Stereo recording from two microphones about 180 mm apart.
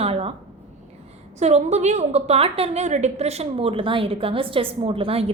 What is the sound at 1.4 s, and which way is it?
A woman's voice, 40° right (ahead or behind).